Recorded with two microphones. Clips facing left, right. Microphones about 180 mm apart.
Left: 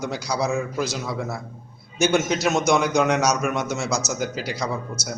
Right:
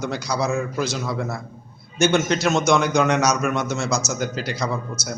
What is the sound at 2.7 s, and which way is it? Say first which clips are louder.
A man's voice: right 1 dB; 5° left (ahead or behind).